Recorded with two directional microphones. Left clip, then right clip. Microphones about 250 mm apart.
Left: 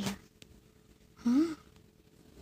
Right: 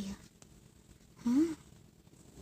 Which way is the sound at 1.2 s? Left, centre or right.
Centre.